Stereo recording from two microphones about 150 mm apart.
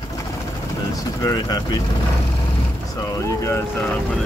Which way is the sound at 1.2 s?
25° left (ahead or behind).